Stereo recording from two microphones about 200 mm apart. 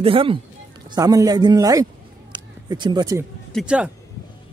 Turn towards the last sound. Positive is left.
turn(degrees=-5)  # may be behind; listen again after turning